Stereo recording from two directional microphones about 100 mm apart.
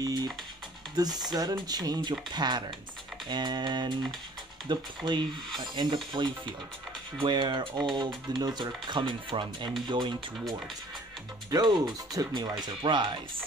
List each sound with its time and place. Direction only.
0.0 s music: 40° right (ahead or behind)
0.9 s speech: 40° right (ahead or behind)
11.5 s speech: 40° right (ahead or behind)